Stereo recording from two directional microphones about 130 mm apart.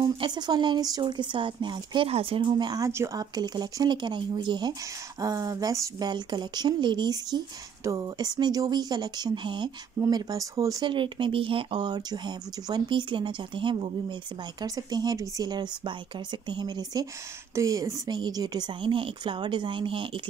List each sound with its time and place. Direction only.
0.0 s speech: 35° right (ahead or behind)